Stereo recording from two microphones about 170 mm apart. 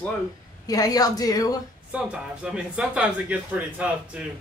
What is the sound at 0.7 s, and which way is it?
Speech, 20° left (ahead or behind).